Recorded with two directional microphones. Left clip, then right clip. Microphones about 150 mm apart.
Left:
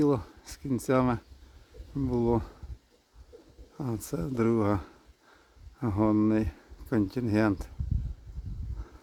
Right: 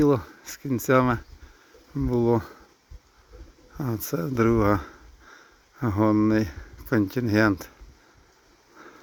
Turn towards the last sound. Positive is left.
turn(degrees=-5)  # may be behind; listen again after turning